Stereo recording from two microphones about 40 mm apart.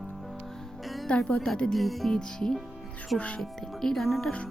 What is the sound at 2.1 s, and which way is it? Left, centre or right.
Speech, centre.